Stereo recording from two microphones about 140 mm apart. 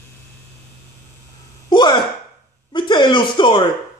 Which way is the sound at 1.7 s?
30° left (ahead or behind).